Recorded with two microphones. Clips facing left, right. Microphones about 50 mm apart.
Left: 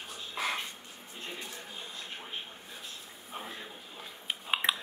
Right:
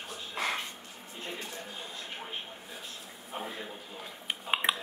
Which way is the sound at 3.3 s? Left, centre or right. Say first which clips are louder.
Right 4 dB; centre.